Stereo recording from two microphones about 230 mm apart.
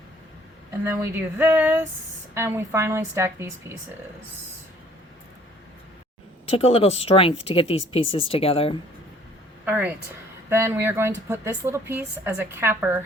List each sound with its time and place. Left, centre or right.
0.9 s a woman's voice: centre
6.6 s speech: left
9.6 s a woman's voice: centre